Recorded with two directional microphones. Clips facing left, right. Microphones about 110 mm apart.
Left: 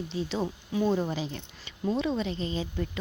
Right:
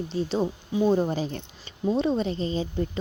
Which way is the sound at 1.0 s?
40° right (ahead or behind).